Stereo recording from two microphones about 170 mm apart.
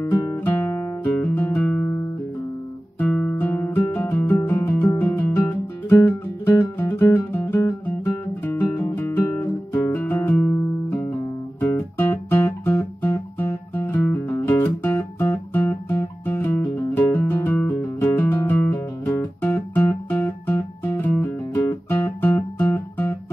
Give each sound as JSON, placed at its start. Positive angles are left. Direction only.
{"t": 0.0, "sound": "guitar", "side_deg": 15}
{"t": 3.0, "sound": "guitar", "side_deg": 5}
{"t": 3.9, "sound": "music", "side_deg": 15}
{"t": 13.7, "sound": "guitar", "side_deg": 15}